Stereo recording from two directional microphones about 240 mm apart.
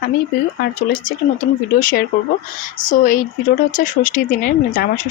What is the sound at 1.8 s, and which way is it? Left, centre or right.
Speech, left.